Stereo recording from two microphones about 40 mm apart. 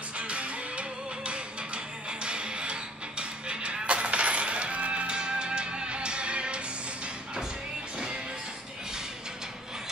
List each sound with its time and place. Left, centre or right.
0.2 s music: right